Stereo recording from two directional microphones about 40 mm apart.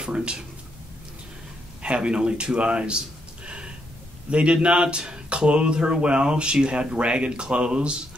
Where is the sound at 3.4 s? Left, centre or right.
Right.